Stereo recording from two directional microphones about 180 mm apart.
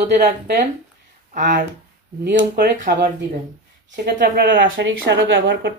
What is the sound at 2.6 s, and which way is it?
Speech, 60° right (ahead or behind).